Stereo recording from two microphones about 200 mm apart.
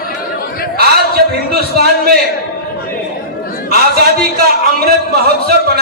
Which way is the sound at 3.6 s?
50° right (ahead or behind).